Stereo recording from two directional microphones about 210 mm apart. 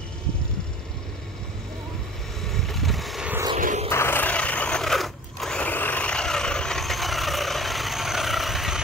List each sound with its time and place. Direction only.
2.4 s vehicle: centre (ahead or behind)
3.5 s a sound: 35° right (ahead or behind)
3.9 s crunch: 10° left (ahead or behind)